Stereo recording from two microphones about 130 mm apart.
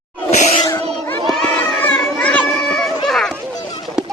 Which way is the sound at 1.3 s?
10° left (ahead or behind).